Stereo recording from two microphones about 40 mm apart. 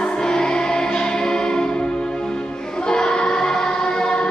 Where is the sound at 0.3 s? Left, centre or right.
Centre.